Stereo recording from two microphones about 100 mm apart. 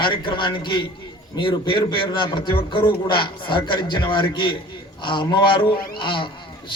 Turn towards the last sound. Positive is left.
turn(degrees=55)  # may be behind; listen again after turning